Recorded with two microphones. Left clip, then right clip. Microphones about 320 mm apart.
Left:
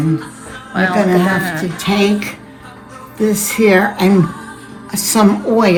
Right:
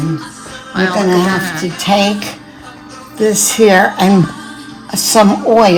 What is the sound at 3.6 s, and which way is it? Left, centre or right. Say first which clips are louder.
Speech: right 3 dB; right.